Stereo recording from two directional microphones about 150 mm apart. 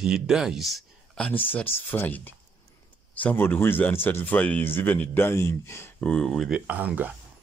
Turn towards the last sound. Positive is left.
turn(degrees=-10)  # may be behind; listen again after turning